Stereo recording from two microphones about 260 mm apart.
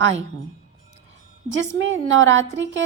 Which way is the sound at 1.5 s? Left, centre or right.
Right.